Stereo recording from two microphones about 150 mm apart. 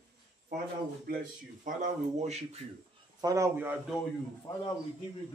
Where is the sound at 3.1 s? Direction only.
20° right (ahead or behind).